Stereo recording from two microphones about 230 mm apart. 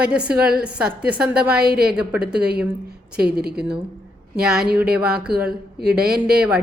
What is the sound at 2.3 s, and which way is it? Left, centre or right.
A woman's voice, right.